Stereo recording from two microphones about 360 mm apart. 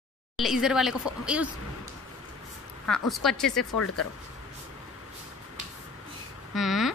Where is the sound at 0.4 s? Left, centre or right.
Centre.